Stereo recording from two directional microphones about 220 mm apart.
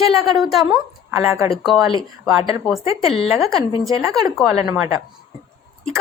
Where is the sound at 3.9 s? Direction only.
15° right (ahead or behind).